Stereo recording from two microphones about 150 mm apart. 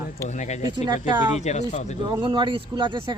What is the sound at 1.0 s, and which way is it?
Speech, 50° left (ahead or behind).